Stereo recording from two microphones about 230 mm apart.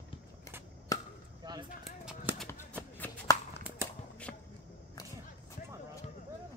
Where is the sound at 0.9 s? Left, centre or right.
Centre.